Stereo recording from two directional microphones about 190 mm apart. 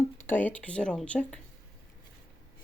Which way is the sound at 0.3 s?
10° left (ahead or behind).